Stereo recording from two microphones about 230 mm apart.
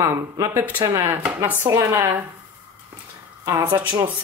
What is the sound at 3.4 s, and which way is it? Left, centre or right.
Speech, centre.